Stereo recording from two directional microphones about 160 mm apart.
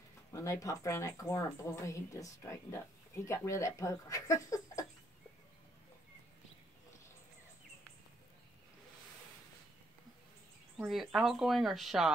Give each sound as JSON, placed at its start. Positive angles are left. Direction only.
{"t": 0.3, "sound": "a woman's voice", "side_deg": 20}
{"t": 10.8, "sound": "speech", "side_deg": -5}